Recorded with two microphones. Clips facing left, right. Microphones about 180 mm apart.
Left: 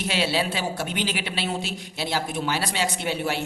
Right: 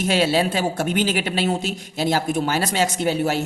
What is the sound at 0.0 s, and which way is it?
A man's voice, 45° right (ahead or behind).